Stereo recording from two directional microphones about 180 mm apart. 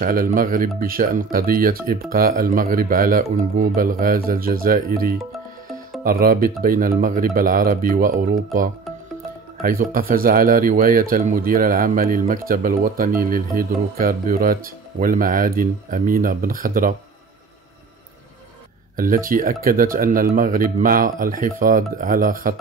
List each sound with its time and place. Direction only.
0.0 s speech: 50° right (ahead or behind)
9.6 s speech: 50° right (ahead or behind)
18.9 s speech: 50° right (ahead or behind)